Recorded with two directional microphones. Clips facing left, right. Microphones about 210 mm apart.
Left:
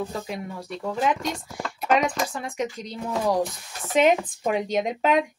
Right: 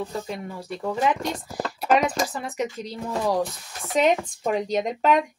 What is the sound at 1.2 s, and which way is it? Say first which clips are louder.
Speech: right 2 dB; 35° right (ahead or behind).